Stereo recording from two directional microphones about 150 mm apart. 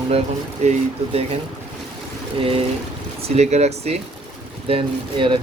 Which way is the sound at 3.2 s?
45° right (ahead or behind).